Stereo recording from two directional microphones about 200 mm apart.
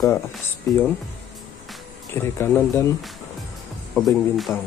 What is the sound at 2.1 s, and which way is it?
Speech, 10° left (ahead or behind).